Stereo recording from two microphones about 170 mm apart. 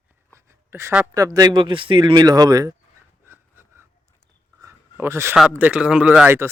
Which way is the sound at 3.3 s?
15° right (ahead or behind).